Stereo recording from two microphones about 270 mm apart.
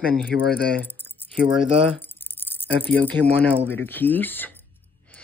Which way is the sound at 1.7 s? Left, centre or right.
Right.